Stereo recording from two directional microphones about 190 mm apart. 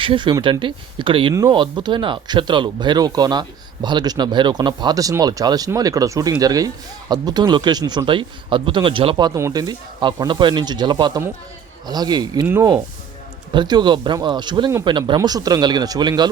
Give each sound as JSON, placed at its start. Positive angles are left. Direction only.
{"t": 0.0, "sound": "speech", "side_deg": -25}